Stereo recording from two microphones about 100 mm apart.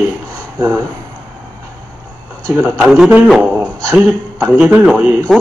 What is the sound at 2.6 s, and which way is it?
A man's voice, 10° right (ahead or behind).